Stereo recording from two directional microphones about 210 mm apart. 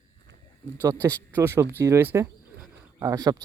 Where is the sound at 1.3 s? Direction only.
10° right (ahead or behind).